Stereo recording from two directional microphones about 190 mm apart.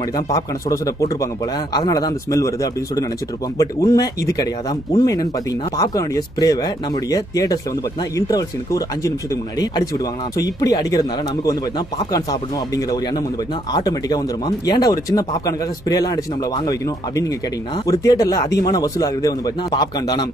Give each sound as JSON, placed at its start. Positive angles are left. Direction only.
{"t": 0.3, "sound": "speech", "side_deg": 15}